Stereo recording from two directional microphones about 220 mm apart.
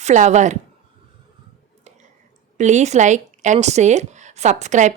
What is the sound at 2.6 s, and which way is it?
Speech, 30° right (ahead or behind).